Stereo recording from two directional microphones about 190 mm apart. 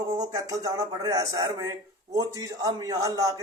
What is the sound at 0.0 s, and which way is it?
Speech, 20° right (ahead or behind).